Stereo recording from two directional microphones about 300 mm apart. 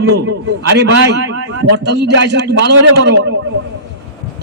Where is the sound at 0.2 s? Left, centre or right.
Right.